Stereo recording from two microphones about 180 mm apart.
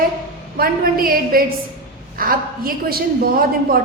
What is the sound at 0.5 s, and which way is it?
A woman's voice, 55° right (ahead or behind).